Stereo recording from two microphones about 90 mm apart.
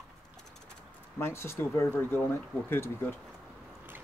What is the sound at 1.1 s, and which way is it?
Speech, 30° left (ahead or behind).